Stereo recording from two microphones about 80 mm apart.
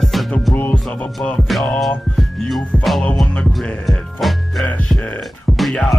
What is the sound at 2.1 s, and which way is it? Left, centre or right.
Music, centre.